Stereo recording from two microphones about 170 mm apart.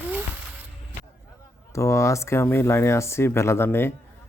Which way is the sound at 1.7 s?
15° left (ahead or behind).